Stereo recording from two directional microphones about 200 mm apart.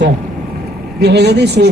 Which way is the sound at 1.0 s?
55° right (ahead or behind).